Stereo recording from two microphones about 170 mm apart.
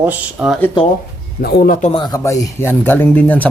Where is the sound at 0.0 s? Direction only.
10° right (ahead or behind).